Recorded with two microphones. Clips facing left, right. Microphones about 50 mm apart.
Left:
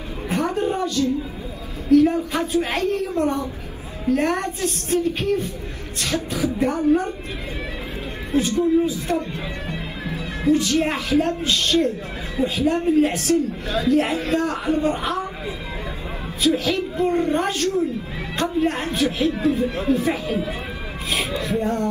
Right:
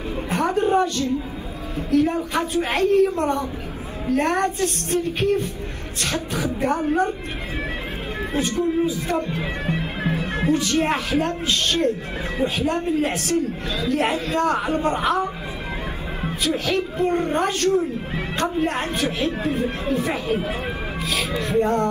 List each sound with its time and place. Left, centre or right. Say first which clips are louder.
0.3 s a sound: right 2 dB; right
1.9 s speech: left 4 dB; right
8.3 s speech: left 4 dB; right
16.4 s speech: left 3 dB; right